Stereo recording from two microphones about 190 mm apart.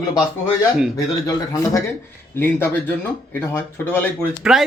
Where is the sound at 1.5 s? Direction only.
15° left (ahead or behind).